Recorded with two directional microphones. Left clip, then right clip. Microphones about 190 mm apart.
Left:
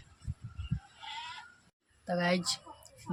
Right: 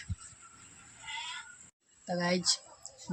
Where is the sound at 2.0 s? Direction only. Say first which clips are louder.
Even; 5° left (ahead or behind).